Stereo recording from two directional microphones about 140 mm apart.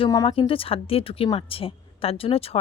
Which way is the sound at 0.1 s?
25° left (ahead or behind).